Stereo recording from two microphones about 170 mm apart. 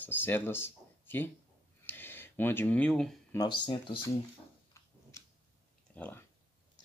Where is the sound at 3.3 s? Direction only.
25° left (ahead or behind).